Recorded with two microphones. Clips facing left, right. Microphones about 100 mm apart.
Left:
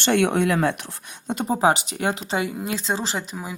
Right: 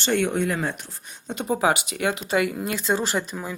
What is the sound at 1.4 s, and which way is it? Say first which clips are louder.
Speech: left 2 dB; 30° left (ahead or behind).